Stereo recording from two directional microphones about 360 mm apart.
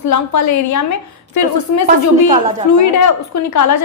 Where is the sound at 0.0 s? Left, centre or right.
Left.